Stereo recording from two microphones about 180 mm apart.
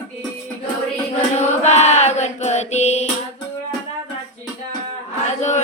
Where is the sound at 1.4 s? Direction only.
40° left (ahead or behind).